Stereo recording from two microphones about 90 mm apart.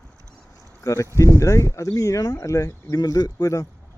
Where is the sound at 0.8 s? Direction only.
35° left (ahead or behind).